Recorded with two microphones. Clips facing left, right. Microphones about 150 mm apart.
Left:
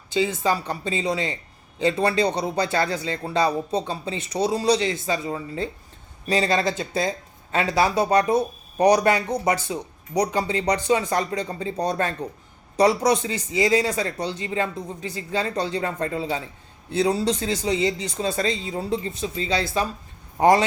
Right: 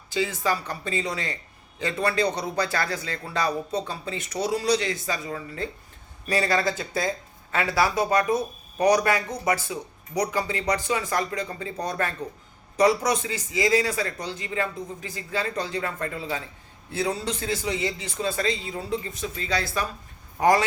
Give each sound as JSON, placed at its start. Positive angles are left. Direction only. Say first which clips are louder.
{"t": 0.1, "sound": "a man's voice", "louder": "left 3 dB", "side_deg": 25}